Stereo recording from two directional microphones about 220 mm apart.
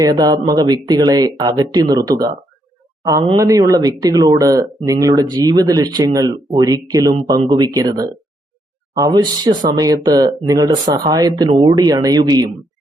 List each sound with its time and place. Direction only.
0.0 s speech: 15° right (ahead or behind)